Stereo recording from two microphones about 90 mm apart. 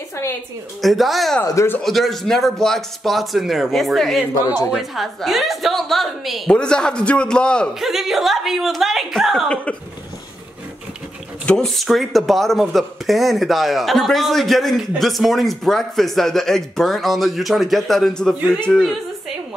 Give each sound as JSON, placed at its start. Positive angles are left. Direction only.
{"t": 0.7, "sound": "speech", "side_deg": 0}
{"t": 1.4, "sound": "a man's voice", "side_deg": 35}
{"t": 1.8, "sound": "a man's voice", "side_deg": 0}
{"t": 7.8, "sound": "speech", "side_deg": -5}
{"t": 11.4, "sound": "speech", "side_deg": 5}